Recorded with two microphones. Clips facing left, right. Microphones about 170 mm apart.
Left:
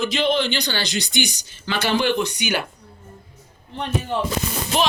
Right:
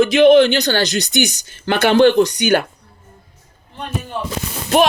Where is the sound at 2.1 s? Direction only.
40° right (ahead or behind).